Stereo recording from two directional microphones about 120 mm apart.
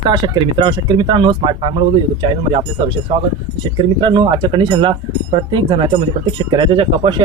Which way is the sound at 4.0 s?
40° right (ahead or behind).